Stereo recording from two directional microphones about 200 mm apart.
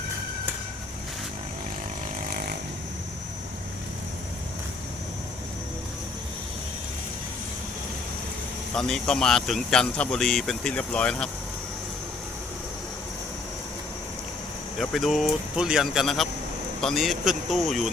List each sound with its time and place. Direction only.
2.2 s snoring: 50° right (ahead or behind)
8.7 s speech: 5° left (ahead or behind)
14.8 s speech: centre (ahead or behind)